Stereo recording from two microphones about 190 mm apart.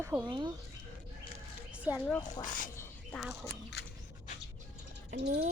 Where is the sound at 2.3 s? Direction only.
40° left (ahead or behind).